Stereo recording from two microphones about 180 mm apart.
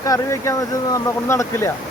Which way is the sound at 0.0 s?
15° left (ahead or behind).